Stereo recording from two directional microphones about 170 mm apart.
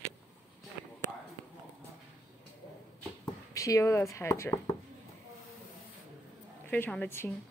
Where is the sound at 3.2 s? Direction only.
20° left (ahead or behind).